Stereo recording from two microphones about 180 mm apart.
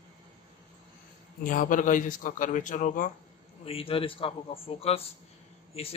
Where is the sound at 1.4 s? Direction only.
45° left (ahead or behind).